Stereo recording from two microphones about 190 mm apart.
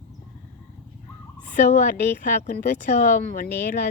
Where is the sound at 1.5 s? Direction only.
40° left (ahead or behind).